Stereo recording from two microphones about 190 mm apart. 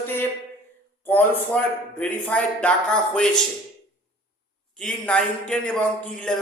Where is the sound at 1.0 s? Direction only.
10° left (ahead or behind).